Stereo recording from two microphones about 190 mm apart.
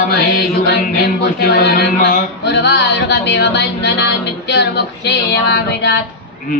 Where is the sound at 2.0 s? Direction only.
45° left (ahead or behind).